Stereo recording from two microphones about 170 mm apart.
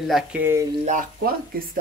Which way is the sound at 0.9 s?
55° right (ahead or behind).